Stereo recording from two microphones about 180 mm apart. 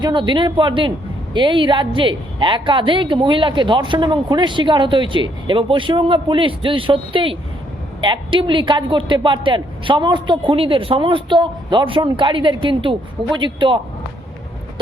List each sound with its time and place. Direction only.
0.0 s a woman's voice: 25° right (ahead or behind)